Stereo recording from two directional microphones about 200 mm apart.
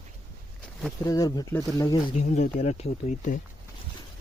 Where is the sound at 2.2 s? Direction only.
35° left (ahead or behind).